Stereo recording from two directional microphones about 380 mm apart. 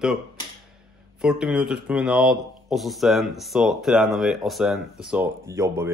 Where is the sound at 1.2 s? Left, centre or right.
Centre.